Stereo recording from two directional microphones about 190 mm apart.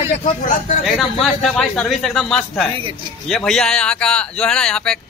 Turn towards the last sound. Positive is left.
turn(degrees=5)  # may be behind; listen again after turning